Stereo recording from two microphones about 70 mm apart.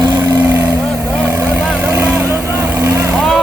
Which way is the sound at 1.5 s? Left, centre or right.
Centre.